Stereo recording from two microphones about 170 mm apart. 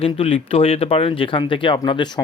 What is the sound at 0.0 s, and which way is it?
Speech, 35° left (ahead or behind).